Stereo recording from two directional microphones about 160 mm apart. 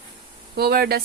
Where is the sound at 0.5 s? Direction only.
80° right.